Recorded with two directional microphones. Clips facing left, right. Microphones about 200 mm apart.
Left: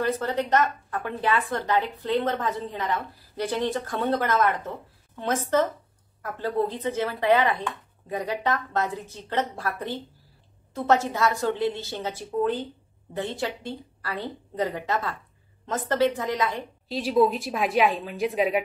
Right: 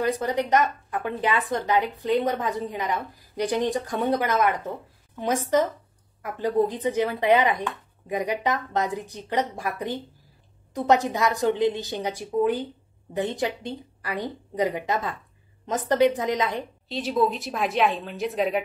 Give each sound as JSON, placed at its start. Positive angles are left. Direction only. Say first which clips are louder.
{"t": 0.0, "sound": "speech", "louder": "right 1 dB", "side_deg": -15}
{"t": 16.9, "sound": "a woman's voice", "louder": "left 2 dB", "side_deg": 5}